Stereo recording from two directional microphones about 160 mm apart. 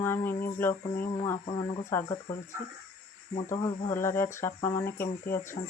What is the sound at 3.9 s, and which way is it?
Speech, 15° left (ahead or behind).